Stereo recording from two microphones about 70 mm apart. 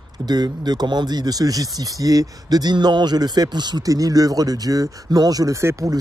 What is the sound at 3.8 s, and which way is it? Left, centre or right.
Speech, right.